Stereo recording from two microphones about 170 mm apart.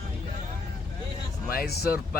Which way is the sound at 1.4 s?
60° left (ahead or behind).